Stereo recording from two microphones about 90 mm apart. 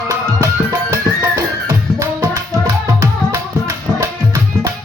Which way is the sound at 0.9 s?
35° right (ahead or behind).